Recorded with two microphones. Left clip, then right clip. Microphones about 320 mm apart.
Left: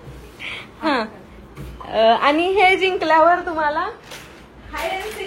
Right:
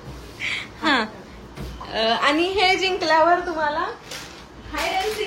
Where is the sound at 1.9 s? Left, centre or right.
Centre.